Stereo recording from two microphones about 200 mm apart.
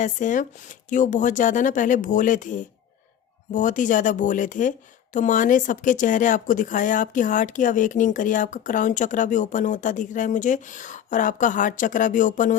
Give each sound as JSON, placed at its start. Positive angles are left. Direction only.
{"t": 0.0, "sound": "speech", "side_deg": 40}